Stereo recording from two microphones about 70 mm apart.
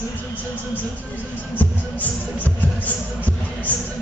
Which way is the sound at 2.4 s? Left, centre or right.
Left.